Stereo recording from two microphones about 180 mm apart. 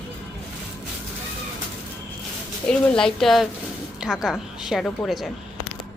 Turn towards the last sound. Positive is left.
turn(degrees=0)  # may be behind; listen again after turning